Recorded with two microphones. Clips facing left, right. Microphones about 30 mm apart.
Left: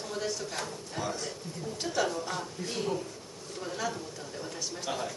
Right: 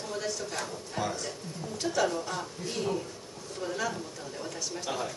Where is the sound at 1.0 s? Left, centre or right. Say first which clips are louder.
Right 2 dB; centre.